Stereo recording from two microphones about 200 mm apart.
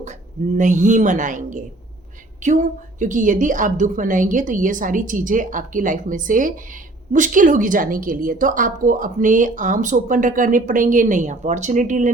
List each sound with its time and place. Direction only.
0.0 s a woman's voice: 35° right (ahead or behind)